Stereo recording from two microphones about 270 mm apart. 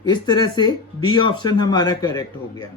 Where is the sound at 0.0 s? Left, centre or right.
Centre.